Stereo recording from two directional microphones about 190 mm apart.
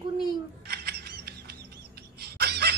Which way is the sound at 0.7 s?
55° right (ahead or behind).